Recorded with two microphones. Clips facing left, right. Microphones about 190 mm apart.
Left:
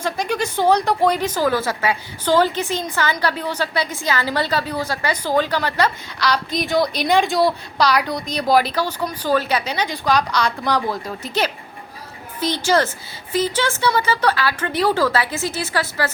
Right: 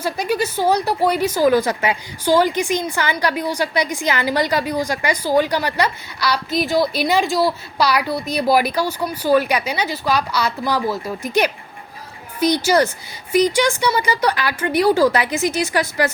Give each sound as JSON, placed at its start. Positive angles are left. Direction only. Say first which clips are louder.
{"t": 0.0, "sound": "speech", "louder": "right 2 dB", "side_deg": -5}